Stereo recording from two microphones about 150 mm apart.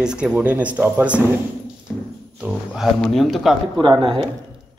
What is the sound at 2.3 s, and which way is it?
A man's voice, 5° right (ahead or behind).